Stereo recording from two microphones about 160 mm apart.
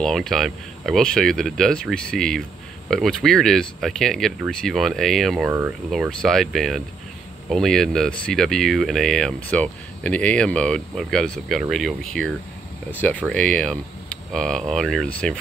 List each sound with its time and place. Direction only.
0.0 s speech: centre (ahead or behind)